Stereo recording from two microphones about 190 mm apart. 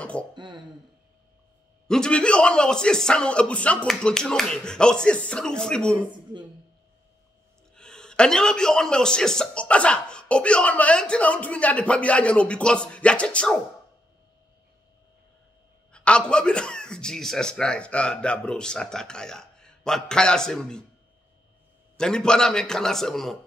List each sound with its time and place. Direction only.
0.0 s throat clearing: 5° left (ahead or behind)
0.3 s speech: 25° right (ahead or behind)
1.9 s a man's voice: 5° left (ahead or behind)
7.7 s a man's voice: 5° left (ahead or behind)
15.9 s a man's voice: 5° left (ahead or behind)
21.9 s a man's voice: 5° left (ahead or behind)